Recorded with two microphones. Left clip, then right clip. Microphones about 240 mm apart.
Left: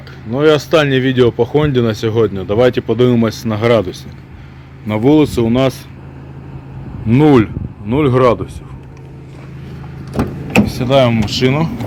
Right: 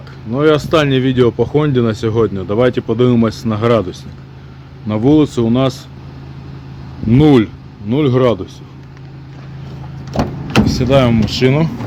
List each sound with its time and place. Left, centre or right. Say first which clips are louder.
0.3 s speech: left 1 dB; centre
7.1 s speech: even; centre
10.8 s speech: left 1 dB; right